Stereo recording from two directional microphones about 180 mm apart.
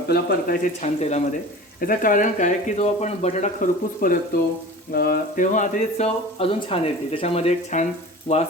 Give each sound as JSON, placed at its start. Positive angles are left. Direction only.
{"t": 0.1, "sound": "speech", "side_deg": 55}
{"t": 0.8, "sound": "speech", "side_deg": 40}
{"t": 1.8, "sound": "speech", "side_deg": 50}